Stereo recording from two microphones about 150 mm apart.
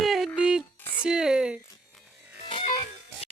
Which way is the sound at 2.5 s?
40° left (ahead or behind).